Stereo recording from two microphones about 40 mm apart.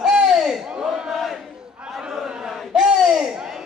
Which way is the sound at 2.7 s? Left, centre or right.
Centre.